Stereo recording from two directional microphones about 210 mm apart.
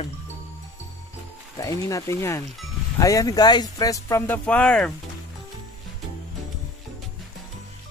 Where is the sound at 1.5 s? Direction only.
15° left (ahead or behind).